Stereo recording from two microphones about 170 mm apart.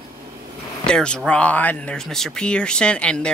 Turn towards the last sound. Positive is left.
turn(degrees=5)  # may be behind; listen again after turning